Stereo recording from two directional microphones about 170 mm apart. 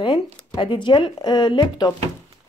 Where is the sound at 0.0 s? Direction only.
30° left (ahead or behind).